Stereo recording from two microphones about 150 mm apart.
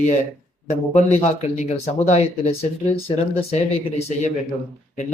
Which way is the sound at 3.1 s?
35° left (ahead or behind).